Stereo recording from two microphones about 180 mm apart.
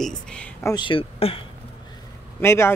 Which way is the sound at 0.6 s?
20° left (ahead or behind).